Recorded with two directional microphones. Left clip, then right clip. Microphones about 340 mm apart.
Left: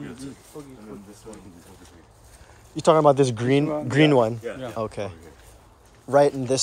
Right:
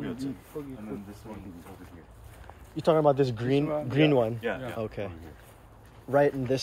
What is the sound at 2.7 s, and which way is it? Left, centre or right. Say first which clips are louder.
Speech: left 6 dB; left.